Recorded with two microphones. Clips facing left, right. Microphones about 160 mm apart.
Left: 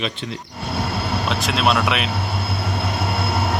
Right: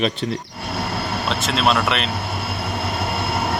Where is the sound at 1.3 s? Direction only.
Centre (ahead or behind).